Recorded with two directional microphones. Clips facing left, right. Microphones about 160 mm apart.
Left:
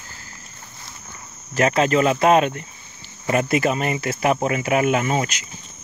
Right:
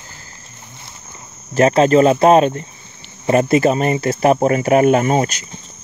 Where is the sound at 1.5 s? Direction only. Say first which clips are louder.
Right 6 dB; 30° right (ahead or behind).